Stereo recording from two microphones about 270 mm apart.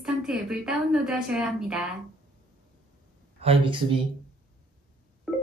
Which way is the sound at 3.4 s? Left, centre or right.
Centre.